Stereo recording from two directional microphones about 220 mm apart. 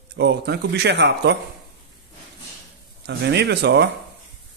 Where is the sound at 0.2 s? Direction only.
50° right (ahead or behind).